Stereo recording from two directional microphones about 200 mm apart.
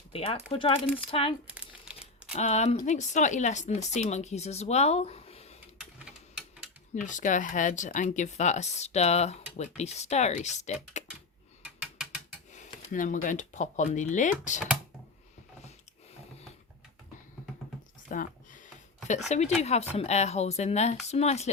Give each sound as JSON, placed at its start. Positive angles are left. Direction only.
{"t": 0.1, "sound": "speech", "side_deg": 30}
{"t": 1.5, "sound": "crumpling", "side_deg": -5}
{"t": 2.3, "sound": "speech", "side_deg": 35}
{"t": 6.9, "sound": "speech", "side_deg": 40}
{"t": 11.6, "sound": "mechanisms", "side_deg": -5}
{"t": 12.5, "sound": "speech", "side_deg": 40}
{"t": 18.1, "sound": "a sound", "side_deg": 40}
{"t": 19.3, "sound": "speech", "side_deg": 35}